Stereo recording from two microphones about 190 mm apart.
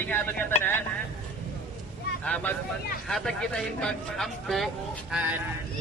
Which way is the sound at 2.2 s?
5° left (ahead or behind).